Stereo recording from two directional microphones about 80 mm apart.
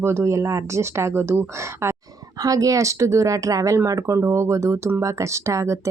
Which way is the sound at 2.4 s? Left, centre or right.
Right.